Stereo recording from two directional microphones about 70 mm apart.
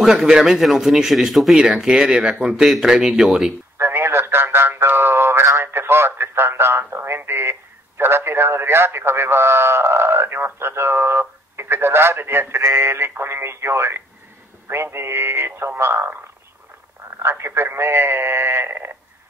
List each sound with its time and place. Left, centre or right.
0.0 s a man's voice: centre
3.7 s a sound: right
8.0 s a man's voice: right
17.2 s a man's voice: right